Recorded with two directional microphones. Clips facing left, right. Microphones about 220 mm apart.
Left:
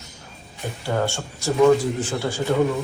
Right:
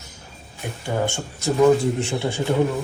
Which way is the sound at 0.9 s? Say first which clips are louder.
Even; 15° right (ahead or behind).